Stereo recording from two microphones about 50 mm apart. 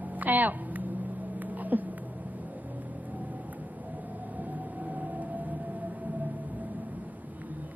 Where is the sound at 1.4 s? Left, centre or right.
Right.